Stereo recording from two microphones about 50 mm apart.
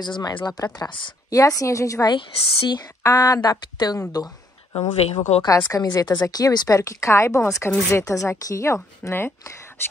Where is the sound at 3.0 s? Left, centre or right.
Left.